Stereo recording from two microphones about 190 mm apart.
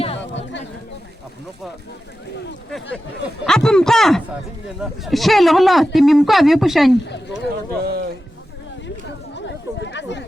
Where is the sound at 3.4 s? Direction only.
5° left (ahead or behind).